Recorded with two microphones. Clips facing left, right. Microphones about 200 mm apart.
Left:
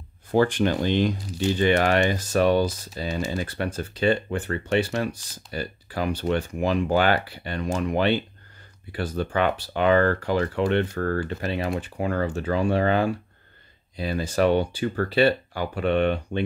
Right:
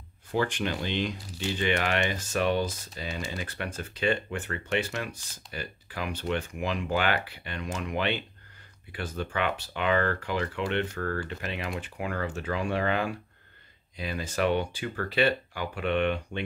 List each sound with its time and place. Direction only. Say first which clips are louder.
0.3 s speech: left 8 dB; 40° left (ahead or behind)